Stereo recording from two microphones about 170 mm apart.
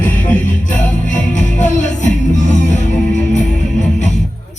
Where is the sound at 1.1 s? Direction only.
45° left (ahead or behind).